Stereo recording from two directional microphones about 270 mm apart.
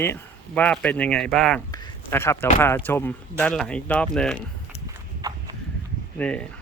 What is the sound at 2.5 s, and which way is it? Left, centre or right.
Speech, centre.